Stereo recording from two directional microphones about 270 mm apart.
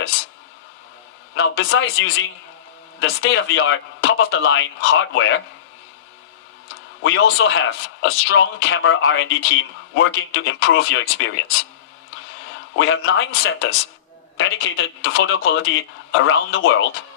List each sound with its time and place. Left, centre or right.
1.4 s a man's voice: left
7.0 s a man's voice: left
12.7 s a man's voice: left